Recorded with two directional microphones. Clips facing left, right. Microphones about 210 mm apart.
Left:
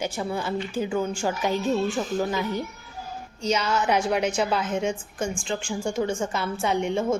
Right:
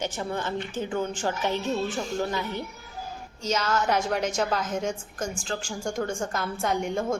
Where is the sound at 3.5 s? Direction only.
10° left (ahead or behind).